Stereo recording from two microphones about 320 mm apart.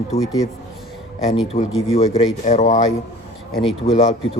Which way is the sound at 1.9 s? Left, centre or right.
Centre.